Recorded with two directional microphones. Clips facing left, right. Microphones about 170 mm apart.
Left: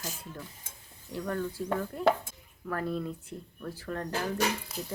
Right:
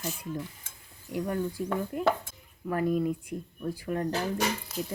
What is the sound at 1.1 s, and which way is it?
Speech, 15° right (ahead or behind).